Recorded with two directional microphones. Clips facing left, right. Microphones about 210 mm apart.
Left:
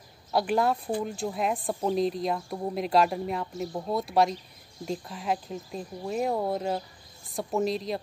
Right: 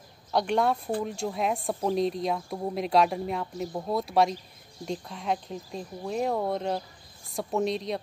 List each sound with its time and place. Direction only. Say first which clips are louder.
0.3 s speech: even; 5° left (ahead or behind)